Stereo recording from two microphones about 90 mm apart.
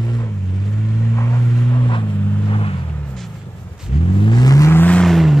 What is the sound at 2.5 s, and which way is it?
Vehicle, 90° left.